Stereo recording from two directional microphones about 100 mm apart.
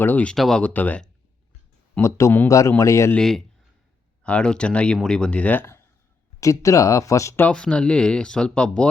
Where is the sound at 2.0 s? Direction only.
30° left (ahead or behind).